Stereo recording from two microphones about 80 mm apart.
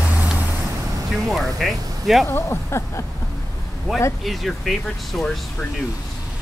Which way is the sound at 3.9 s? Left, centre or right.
Centre.